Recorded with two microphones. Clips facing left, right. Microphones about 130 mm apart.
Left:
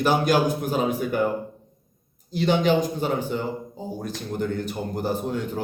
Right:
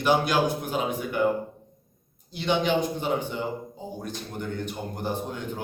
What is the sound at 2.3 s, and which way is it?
A man's voice, 40° left (ahead or behind).